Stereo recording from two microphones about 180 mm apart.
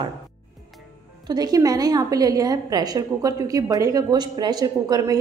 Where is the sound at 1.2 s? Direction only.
20° right (ahead or behind).